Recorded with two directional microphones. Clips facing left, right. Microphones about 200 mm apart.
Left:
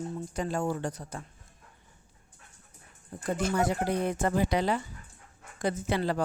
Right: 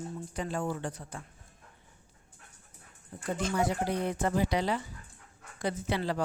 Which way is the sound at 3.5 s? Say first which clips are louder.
Left 1 dB; 50° left (ahead or behind).